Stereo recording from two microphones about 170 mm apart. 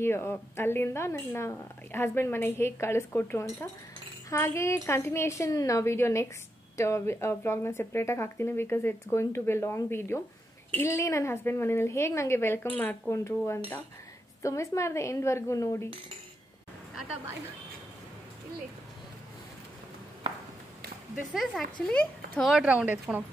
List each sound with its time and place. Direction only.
0.0 s speech: 15° left (ahead or behind)
21.3 s a woman's voice: centre (ahead or behind)
22.5 s speech: 5° right (ahead or behind)